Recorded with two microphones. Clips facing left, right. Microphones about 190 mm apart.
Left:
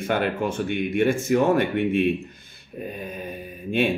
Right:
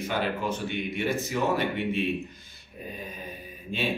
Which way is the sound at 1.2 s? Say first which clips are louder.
Left 7 dB; 50° left (ahead or behind).